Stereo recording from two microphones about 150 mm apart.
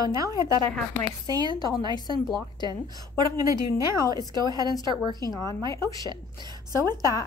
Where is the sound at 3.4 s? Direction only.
20° right (ahead or behind).